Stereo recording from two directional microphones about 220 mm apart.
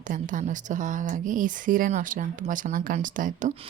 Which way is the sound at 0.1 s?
35° right (ahead or behind).